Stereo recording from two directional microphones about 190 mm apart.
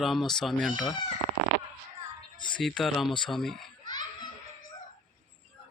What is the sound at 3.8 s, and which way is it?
Laughter, 20° left (ahead or behind).